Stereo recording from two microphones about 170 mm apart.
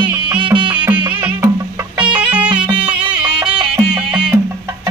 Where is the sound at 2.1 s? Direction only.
10° right (ahead or behind).